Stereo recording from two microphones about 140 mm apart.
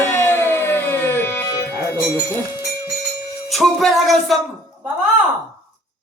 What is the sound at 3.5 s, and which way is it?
Music, centre (ahead or behind).